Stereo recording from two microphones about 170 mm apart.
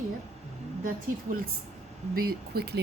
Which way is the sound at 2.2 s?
65° right (ahead or behind).